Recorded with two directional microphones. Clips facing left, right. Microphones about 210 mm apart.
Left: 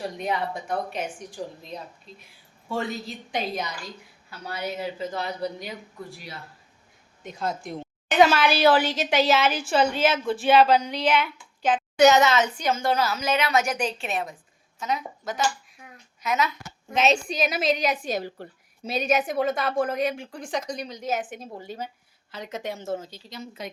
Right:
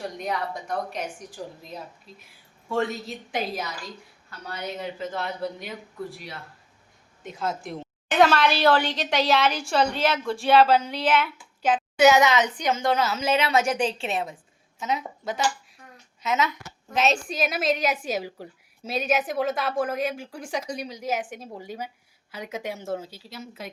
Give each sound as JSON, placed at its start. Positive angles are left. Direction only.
{"t": 0.5, "sound": "a woman's voice", "side_deg": 0}
{"t": 4.3, "sound": "a woman's voice", "side_deg": 10}
{"t": 16.2, "sound": "a woman's voice", "side_deg": -20}
{"t": 16.9, "sound": "a woman's voice", "side_deg": 0}